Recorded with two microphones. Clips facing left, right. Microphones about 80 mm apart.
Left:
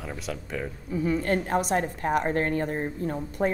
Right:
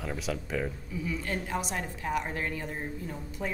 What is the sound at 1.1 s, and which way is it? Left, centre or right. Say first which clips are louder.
A woman's voice: left 8 dB; left.